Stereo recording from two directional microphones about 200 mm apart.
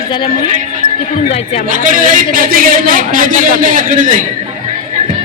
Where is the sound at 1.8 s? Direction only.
40° right (ahead or behind).